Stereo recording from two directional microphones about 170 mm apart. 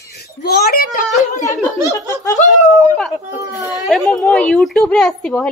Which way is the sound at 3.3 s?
15° right (ahead or behind).